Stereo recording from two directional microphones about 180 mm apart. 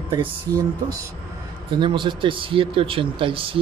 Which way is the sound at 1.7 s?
25° right (ahead or behind).